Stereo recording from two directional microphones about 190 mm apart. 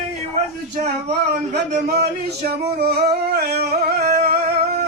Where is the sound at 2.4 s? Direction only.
55° right (ahead or behind).